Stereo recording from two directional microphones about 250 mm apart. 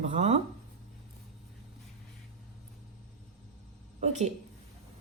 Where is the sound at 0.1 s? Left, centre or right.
Right.